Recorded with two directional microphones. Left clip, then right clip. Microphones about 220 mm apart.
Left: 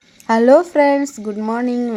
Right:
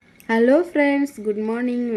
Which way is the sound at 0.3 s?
15° left (ahead or behind).